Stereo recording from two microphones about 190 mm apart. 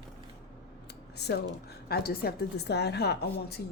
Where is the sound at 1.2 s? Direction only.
60° left (ahead or behind).